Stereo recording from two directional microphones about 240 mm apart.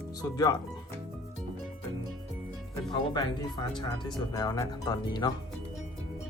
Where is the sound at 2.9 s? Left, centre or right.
Centre.